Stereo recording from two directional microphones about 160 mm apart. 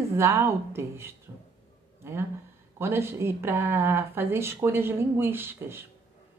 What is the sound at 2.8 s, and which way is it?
Speech, 15° right (ahead or behind).